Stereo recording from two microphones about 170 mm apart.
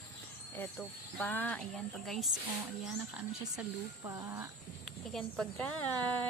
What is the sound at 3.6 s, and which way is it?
Speech, 20° right (ahead or behind).